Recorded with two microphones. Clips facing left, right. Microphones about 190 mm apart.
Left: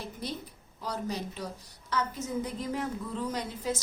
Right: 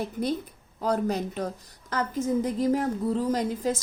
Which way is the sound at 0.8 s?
55° right (ahead or behind).